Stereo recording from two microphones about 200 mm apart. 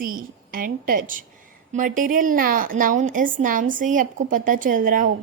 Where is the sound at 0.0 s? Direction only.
45° right (ahead or behind).